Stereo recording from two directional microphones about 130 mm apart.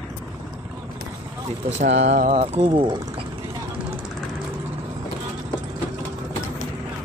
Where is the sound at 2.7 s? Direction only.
40° right (ahead or behind).